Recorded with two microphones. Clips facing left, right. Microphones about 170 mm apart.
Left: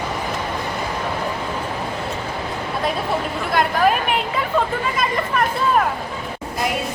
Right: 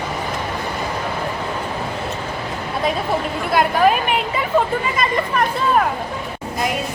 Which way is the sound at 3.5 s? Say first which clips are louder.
Right 2 dB; 5° right (ahead or behind).